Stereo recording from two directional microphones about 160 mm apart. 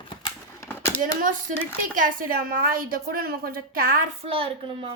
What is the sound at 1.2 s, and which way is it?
A woman's voice, 55° right (ahead or behind).